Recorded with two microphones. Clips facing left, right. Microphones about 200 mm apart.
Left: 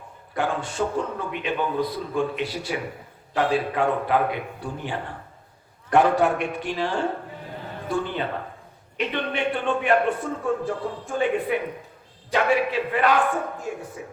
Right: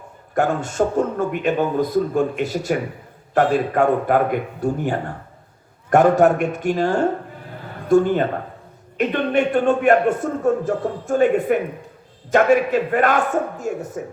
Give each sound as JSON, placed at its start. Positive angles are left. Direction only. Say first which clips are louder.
{"t": 0.3, "sound": "a man's voice", "louder": "right 6 dB", "side_deg": -45}